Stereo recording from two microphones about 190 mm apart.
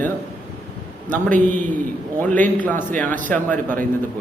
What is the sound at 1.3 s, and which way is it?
A man's voice, 10° left (ahead or behind).